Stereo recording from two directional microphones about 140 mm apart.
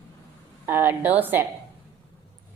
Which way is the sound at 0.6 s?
15° right (ahead or behind).